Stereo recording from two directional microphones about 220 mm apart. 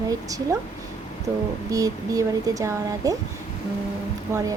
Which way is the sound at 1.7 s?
15° right (ahead or behind).